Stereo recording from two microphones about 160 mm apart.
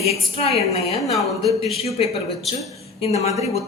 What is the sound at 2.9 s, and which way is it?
Speech, 40° left (ahead or behind).